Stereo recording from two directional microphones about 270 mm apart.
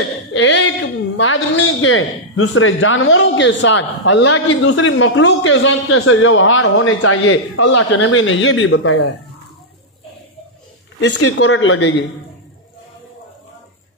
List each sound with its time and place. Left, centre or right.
0.3 s a man's voice: left
7.7 s a man's voice: left
11.3 s a man's voice: left